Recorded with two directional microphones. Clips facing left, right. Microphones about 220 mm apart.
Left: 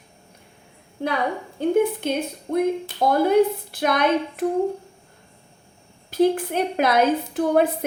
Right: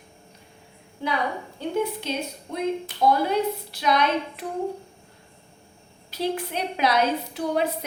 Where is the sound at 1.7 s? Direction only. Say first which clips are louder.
Left 6 dB; 50° left (ahead or behind).